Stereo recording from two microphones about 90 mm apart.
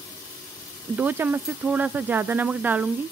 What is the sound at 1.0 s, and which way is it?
Speech, 20° right (ahead or behind).